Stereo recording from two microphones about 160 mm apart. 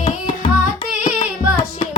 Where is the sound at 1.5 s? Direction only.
35° left (ahead or behind).